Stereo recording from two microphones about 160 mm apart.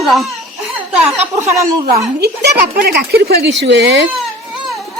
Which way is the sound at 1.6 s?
20° right (ahead or behind).